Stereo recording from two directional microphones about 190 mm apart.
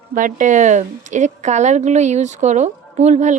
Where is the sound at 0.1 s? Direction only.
45° right (ahead or behind).